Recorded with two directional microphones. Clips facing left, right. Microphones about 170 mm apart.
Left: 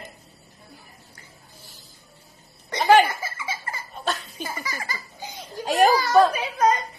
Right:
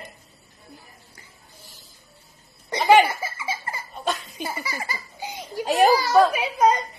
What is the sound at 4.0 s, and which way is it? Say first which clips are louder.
Belly laugh: right 1 dB; 10° right (ahead or behind).